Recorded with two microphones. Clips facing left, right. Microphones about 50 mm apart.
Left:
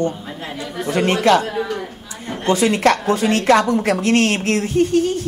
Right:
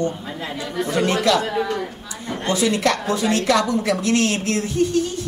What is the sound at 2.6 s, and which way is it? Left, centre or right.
A man's voice, left.